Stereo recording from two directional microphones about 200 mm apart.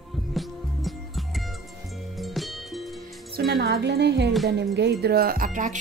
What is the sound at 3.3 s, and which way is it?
A woman's voice, 50° right (ahead or behind).